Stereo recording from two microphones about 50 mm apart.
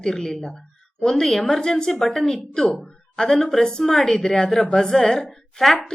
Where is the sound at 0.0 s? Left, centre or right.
Centre.